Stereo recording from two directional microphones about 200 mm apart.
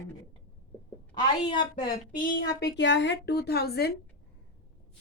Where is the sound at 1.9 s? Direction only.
45° left (ahead or behind).